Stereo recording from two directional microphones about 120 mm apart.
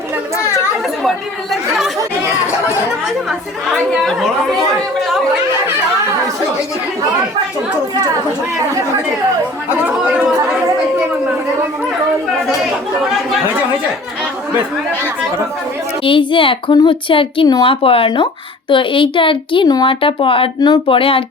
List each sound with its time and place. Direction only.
3.2 s speech: centre (ahead or behind)
9.8 s chatter: 10° right (ahead or behind)
16.0 s a woman's voice: 45° left (ahead or behind)